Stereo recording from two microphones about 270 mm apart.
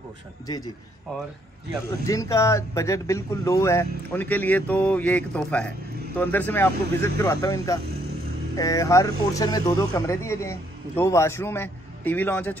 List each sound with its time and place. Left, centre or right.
1.9 s speech: centre